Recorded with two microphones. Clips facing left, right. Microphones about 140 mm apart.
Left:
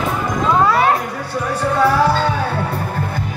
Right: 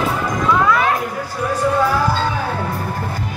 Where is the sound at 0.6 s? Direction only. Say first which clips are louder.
Left 3 dB; 30° left (ahead or behind).